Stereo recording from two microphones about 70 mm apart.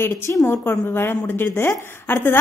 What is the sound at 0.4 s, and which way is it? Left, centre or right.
A woman's voice, left.